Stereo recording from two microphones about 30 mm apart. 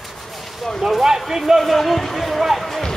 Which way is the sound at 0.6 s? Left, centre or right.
Centre.